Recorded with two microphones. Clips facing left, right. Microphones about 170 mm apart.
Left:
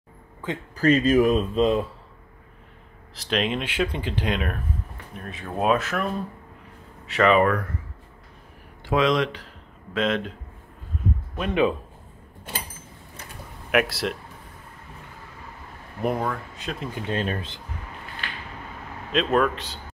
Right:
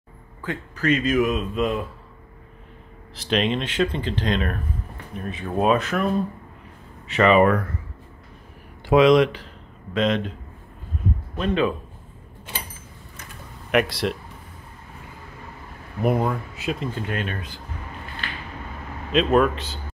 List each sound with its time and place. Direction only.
0.7 s speech: 35° left (ahead or behind)
3.2 s speech: centre (ahead or behind)
7.1 s speech: centre (ahead or behind)
8.8 s speech: 10° right (ahead or behind)
9.9 s speech: centre (ahead or behind)
11.3 s speech: 15° left (ahead or behind)
13.7 s speech: 5° left (ahead or behind)
16.0 s speech: 5° right (ahead or behind)
17.1 s speech: 30° left (ahead or behind)
19.1 s speech: 5° right (ahead or behind)